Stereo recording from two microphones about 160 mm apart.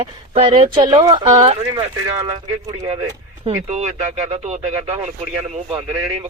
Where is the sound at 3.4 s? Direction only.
45° right (ahead or behind).